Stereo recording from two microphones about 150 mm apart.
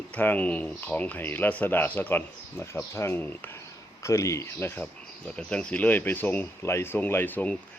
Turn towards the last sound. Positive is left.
turn(degrees=10)  # may be behind; listen again after turning